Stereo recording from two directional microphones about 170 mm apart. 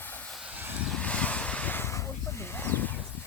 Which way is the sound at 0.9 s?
5° left (ahead or behind).